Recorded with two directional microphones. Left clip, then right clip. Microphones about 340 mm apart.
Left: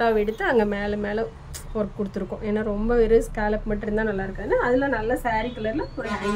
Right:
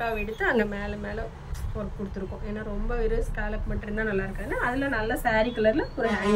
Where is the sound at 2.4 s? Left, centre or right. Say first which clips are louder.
Left 13 dB; left; by 5.7 s centre.